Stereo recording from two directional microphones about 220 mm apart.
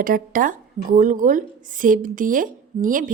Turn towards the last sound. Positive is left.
turn(degrees=-35)  # may be behind; listen again after turning